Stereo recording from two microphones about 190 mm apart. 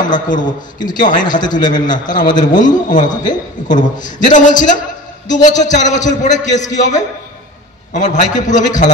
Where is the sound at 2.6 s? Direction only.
45° left (ahead or behind).